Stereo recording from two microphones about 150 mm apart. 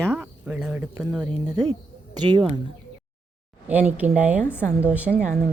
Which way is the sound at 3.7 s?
10° right (ahead or behind).